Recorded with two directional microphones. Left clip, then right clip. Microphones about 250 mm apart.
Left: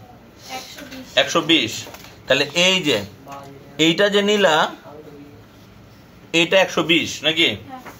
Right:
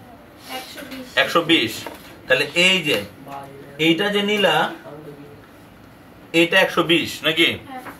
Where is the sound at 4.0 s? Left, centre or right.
Left.